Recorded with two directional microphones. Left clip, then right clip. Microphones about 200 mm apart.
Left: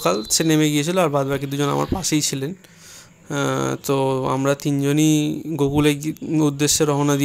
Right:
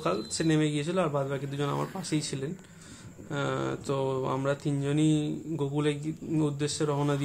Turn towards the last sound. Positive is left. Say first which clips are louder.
# left 11 dB
turn(degrees=35)  # may be behind; listen again after turning